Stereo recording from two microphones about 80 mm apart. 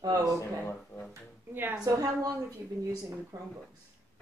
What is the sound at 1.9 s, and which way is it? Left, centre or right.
Speech, right.